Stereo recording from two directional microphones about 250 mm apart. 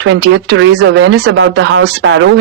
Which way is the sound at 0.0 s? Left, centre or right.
Right.